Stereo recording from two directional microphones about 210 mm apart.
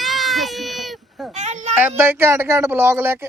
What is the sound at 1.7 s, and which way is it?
Speech, 10° right (ahead or behind).